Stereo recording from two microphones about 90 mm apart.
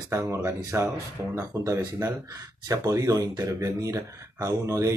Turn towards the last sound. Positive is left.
turn(degrees=-40)  # may be behind; listen again after turning